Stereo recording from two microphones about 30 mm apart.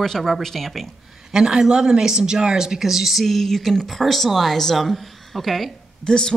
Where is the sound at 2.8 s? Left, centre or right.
Centre.